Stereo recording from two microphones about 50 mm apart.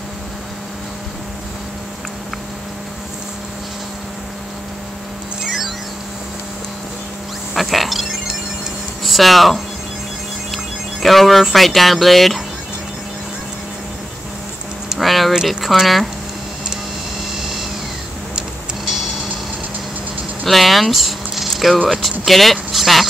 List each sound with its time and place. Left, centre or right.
5.4 s music: centre
7.5 s a sound: centre
9.0 s speech: centre
15.0 s speech: centre
20.4 s a sound: centre
21.8 s speech: centre